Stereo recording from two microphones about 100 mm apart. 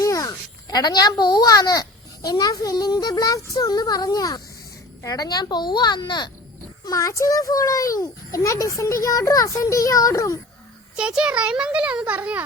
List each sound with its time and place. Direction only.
0.0 s a child's voice: 35° left (ahead or behind)
6.8 s a child's voice: 35° left (ahead or behind)
10.9 s a child's voice: 10° right (ahead or behind)